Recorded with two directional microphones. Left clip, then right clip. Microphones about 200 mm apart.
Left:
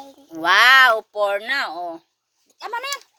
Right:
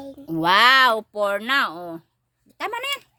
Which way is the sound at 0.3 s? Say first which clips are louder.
Left 2 dB; 10° right (ahead or behind).